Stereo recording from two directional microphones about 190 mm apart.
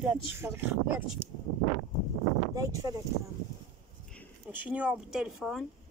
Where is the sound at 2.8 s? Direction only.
20° right (ahead or behind).